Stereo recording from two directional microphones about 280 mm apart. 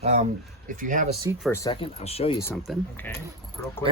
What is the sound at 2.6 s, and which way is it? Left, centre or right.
Speech, centre.